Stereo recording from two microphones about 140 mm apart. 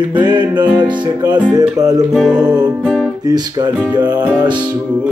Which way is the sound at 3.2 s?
30° right (ahead or behind).